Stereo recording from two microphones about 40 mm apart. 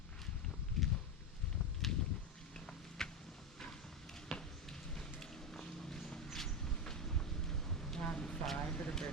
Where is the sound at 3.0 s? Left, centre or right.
Centre.